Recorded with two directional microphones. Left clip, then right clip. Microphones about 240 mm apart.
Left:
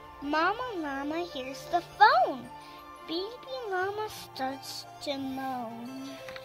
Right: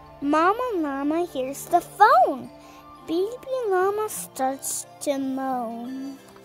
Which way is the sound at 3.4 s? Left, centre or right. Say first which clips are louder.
Right 9 dB; right.